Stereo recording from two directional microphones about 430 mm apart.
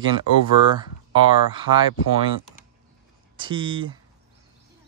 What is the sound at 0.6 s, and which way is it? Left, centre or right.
Speech, right.